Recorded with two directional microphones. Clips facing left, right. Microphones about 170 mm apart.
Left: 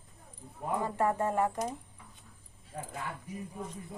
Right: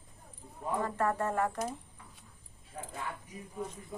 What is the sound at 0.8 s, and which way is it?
Speech, 15° left (ahead or behind).